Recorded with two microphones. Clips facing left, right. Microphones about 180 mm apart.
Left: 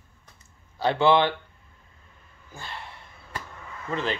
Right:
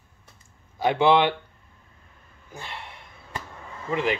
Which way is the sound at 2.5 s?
20° right (ahead or behind).